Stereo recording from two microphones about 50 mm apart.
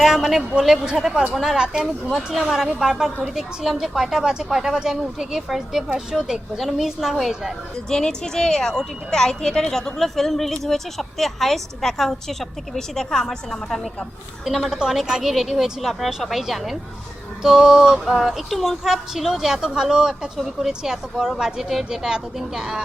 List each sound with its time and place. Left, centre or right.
0.0 s speech: centre
1.5 s speech: centre
2.0 s speech: centre
7.9 s a woman's voice: centre
14.7 s speech: centre
18.5 s speech: centre